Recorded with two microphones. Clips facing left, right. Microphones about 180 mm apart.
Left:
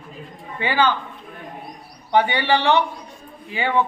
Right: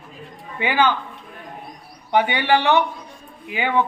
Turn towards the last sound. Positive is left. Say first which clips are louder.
# even
turn(degrees=-15)  # may be behind; listen again after turning